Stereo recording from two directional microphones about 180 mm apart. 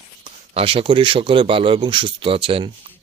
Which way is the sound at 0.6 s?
30° right (ahead or behind).